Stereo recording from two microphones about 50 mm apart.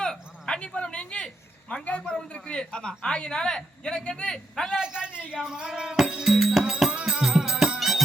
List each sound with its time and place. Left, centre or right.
0.0 s a sound: centre
1.7 s a man's voice: left
4.7 s speech: centre
6.1 s music: centre
7.8 s music: centre